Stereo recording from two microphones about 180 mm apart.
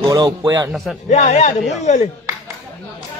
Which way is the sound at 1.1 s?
40° left (ahead or behind).